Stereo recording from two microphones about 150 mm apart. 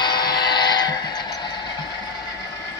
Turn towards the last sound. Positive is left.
turn(degrees=30)  # may be behind; listen again after turning